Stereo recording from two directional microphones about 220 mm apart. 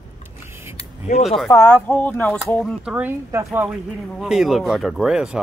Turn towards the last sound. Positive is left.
turn(degrees=-5)  # may be behind; listen again after turning